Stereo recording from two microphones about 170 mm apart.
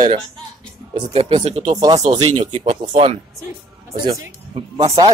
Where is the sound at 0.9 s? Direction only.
30° right (ahead or behind).